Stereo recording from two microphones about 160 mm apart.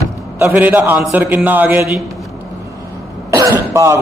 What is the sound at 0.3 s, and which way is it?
A man's voice, 15° right (ahead or behind).